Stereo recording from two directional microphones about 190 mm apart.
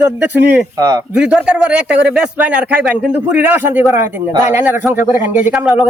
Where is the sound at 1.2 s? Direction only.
5° right (ahead or behind).